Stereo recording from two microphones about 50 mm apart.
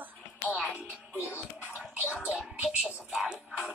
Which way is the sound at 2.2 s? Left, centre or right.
Right.